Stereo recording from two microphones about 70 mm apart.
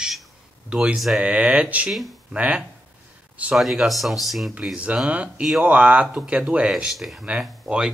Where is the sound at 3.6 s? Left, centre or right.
Centre.